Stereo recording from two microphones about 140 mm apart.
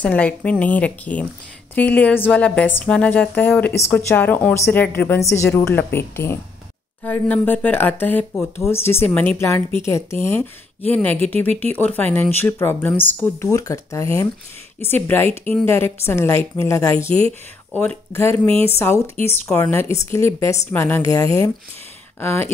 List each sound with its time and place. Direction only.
0.0 s speech: 10° left (ahead or behind)